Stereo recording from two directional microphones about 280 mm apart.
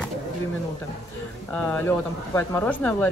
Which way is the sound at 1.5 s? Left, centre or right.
Centre.